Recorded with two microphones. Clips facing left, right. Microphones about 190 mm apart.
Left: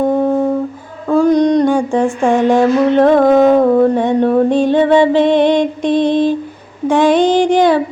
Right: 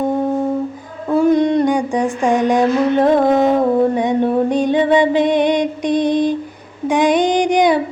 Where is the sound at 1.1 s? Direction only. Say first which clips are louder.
Left 3 dB; 5° right (ahead or behind).